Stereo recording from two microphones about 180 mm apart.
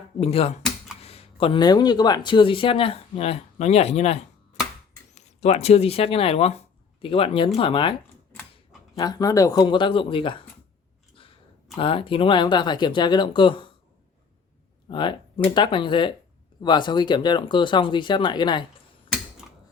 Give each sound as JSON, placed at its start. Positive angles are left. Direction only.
{"t": 0.2, "sound": "speech", "side_deg": 35}
{"t": 9.0, "sound": "speech", "side_deg": 20}
{"t": 11.1, "sound": "chewing", "side_deg": 30}
{"t": 11.8, "sound": "speech", "side_deg": 30}
{"t": 14.8, "sound": "speech", "side_deg": 25}